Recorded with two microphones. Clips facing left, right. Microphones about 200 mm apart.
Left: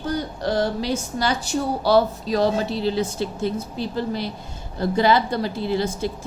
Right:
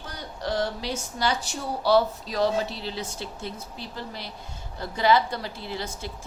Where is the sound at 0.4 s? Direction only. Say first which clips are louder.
Left 4 dB; 40° left (ahead or behind).